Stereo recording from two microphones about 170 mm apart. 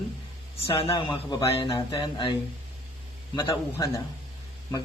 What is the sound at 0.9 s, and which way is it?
Speech, 25° left (ahead or behind).